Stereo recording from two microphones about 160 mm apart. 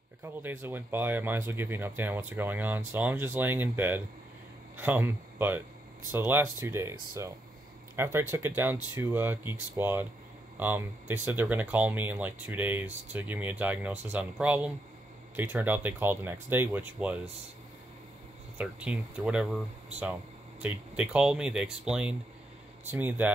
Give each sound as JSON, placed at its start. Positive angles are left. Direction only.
{"t": 0.2, "sound": "speech", "side_deg": -15}
{"t": 18.6, "sound": "speech", "side_deg": -5}
{"t": 20.6, "sound": "speech", "side_deg": -10}